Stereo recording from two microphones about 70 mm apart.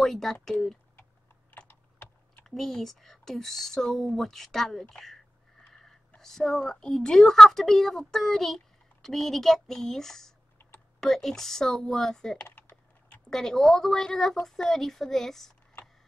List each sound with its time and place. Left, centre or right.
0.0 s speech: centre
1.7 s typing: left
2.4 s a woman's voice: centre
12.4 s typing: left
13.3 s speech: centre